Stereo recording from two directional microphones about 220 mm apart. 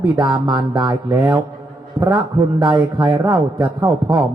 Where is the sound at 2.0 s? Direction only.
20° right (ahead or behind).